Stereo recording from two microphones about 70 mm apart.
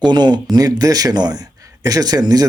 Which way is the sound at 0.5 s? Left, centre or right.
Right.